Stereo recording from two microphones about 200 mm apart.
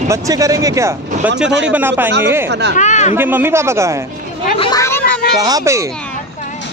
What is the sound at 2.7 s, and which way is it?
Speech, 35° left (ahead or behind).